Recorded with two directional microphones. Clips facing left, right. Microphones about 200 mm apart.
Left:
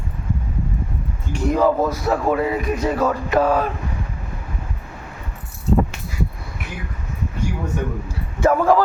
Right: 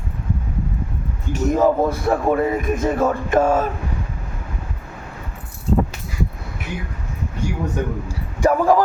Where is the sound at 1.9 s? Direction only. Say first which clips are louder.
Right 1 dB; 55° right (ahead or behind).